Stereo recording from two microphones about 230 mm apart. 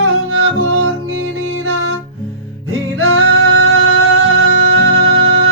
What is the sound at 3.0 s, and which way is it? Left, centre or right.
Music, right.